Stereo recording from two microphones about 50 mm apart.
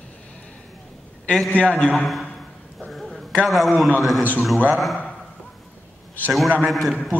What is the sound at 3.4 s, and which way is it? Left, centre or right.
A man's voice, centre.